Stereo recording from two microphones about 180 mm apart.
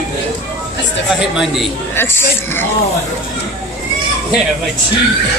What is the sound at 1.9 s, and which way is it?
Speech, 15° left (ahead or behind).